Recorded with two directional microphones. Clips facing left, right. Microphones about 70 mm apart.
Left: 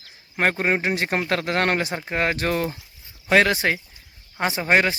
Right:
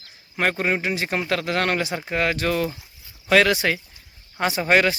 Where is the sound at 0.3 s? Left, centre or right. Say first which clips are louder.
Left 1 dB; left.